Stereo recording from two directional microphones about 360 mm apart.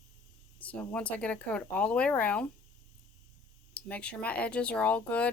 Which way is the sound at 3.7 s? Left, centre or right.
Centre.